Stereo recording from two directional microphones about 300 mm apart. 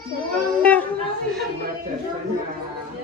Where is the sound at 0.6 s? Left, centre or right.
Centre.